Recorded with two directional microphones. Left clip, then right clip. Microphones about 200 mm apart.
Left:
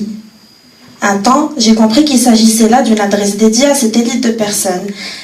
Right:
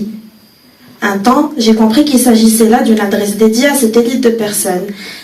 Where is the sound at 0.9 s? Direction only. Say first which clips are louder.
Left 1 dB; 45° left (ahead or behind).